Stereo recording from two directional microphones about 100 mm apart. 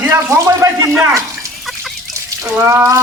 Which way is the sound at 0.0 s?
25° right (ahead or behind).